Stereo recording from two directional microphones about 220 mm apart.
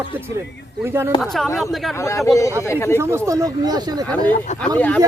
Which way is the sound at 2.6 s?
10° left (ahead or behind).